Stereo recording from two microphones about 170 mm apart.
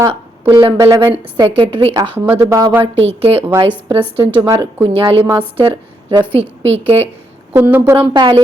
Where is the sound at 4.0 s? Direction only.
10° right (ahead or behind).